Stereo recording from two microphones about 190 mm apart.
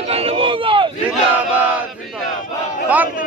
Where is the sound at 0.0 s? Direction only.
30° right (ahead or behind).